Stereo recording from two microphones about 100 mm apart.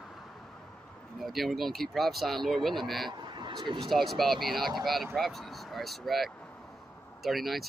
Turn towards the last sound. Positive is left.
turn(degrees=0)  # may be behind; listen again after turning